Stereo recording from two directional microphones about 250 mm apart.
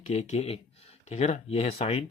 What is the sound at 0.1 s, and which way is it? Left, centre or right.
Speech, left.